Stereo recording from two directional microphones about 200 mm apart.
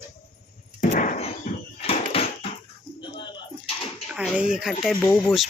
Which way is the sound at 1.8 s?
30° left (ahead or behind).